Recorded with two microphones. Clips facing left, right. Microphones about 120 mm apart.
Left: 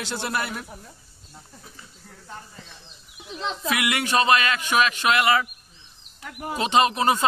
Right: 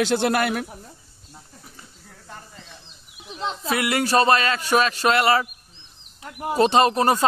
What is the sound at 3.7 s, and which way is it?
Speech, 35° right (ahead or behind).